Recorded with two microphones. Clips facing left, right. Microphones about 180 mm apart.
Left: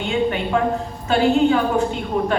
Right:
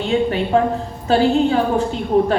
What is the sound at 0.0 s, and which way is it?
A woman's voice, 35° right (ahead or behind).